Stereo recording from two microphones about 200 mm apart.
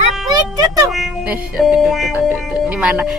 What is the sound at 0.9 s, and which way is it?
A woman's voice, 5° right (ahead or behind).